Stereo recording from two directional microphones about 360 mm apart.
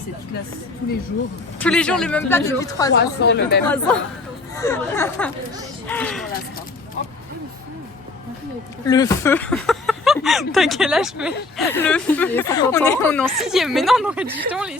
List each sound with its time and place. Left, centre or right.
1.5 s speech: centre
2.9 s a woman's voice: left
3.7 s speech: centre
8.9 s speech: centre